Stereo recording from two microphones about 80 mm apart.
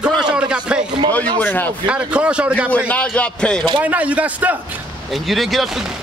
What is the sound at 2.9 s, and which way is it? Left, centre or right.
Speech, centre.